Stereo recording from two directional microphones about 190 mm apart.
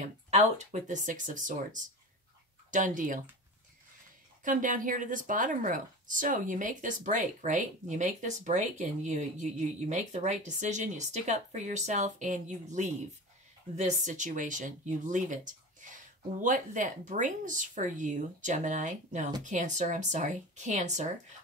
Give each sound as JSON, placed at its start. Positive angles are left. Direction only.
{"t": 0.0, "sound": "a woman's voice", "side_deg": -40}
{"t": 4.5, "sound": "a woman's voice", "side_deg": -45}